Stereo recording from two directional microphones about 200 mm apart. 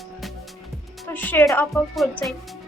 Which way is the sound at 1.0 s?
10° left (ahead or behind).